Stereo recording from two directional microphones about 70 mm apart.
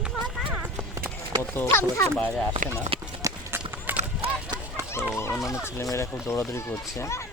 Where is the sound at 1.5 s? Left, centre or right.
Left.